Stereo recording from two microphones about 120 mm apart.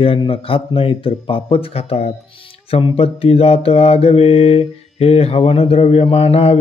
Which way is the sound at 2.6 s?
55° left (ahead or behind).